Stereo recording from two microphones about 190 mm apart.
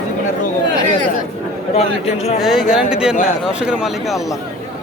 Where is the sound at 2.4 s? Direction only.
Centre (ahead or behind).